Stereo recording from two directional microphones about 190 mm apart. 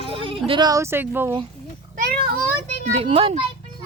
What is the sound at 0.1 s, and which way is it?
Speech, 30° right (ahead or behind).